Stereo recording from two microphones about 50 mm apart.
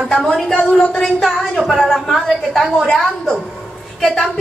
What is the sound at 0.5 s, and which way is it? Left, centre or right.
Speech, left.